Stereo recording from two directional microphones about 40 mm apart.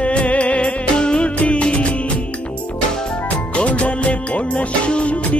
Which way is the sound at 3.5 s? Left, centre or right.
Left.